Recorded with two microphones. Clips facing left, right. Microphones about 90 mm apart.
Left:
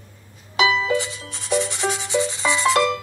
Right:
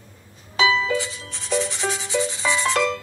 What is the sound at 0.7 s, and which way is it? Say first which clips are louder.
Music: left 1 dB; 35° left (ahead or behind).